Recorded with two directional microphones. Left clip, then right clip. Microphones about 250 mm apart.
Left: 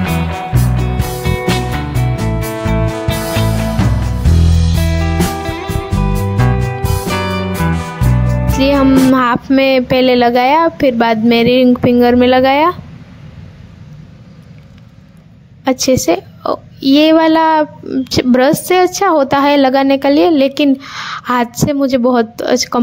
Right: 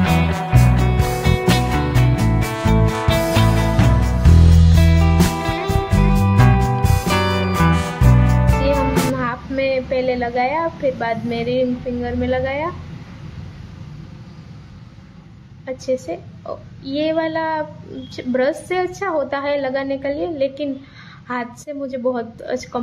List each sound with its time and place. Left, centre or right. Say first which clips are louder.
0.0 s music: left 1 dB; centre
9.1 s a woman's voice: left 11 dB; left
15.6 s a woman's voice: left 10 dB; left